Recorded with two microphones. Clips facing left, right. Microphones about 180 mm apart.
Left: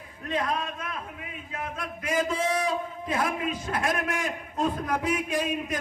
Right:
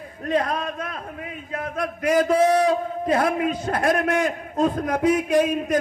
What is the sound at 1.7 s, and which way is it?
Speech, 65° right (ahead or behind).